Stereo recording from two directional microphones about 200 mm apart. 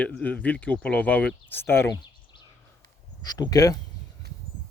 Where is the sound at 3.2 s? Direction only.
20° left (ahead or behind).